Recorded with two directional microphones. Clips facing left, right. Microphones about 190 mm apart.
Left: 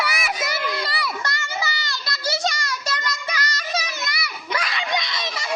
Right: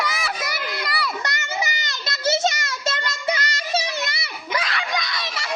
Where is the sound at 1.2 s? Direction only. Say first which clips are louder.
Right 1 dB; 20° right (ahead or behind).